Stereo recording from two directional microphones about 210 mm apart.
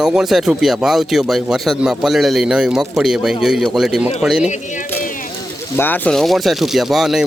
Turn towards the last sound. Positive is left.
turn(degrees=0)  # may be behind; listen again after turning